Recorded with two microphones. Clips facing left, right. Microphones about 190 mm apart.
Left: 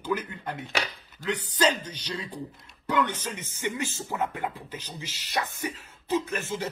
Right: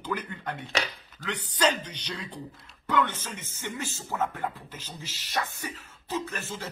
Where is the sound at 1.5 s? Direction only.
10° left (ahead or behind).